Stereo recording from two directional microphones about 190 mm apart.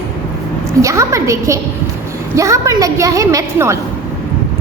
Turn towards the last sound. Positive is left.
turn(degrees=-15)  # may be behind; listen again after turning